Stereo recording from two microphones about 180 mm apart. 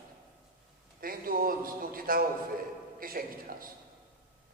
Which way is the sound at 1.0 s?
55° right (ahead or behind).